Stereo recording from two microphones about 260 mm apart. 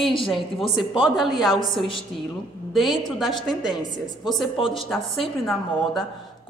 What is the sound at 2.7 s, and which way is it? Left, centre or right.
A woman's voice, centre.